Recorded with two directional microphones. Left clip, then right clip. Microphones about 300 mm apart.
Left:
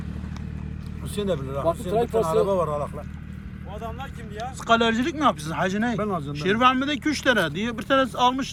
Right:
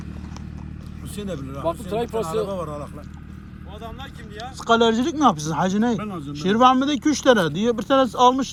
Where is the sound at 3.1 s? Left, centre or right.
Left.